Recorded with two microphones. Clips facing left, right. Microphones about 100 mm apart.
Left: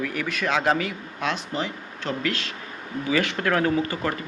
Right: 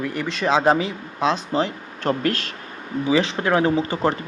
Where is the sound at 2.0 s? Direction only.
45° right (ahead or behind).